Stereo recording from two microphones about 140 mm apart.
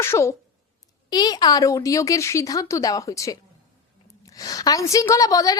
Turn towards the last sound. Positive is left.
turn(degrees=25)  # may be behind; listen again after turning